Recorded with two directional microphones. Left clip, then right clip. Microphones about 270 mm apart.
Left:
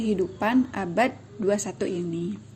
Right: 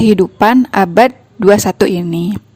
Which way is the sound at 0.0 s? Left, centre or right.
Right.